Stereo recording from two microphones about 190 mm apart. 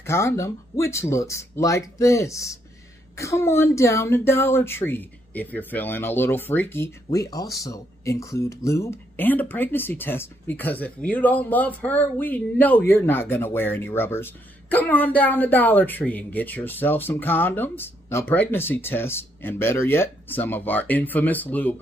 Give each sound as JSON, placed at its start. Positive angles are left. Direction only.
{"t": 0.0, "sound": "a woman's voice", "side_deg": 15}